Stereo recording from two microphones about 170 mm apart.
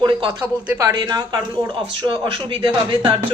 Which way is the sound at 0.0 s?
30° right (ahead or behind).